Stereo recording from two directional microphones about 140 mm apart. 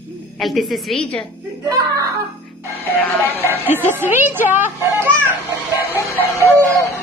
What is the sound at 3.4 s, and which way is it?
A woman's voice, 15° right (ahead or behind).